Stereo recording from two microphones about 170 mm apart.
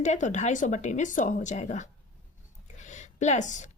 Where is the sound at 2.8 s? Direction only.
45° left (ahead or behind).